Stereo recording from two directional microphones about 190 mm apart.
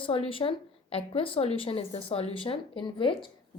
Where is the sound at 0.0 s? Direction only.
30° left (ahead or behind).